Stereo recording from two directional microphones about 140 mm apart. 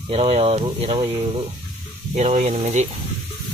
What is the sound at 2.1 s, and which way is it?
Speech, 55° right (ahead or behind).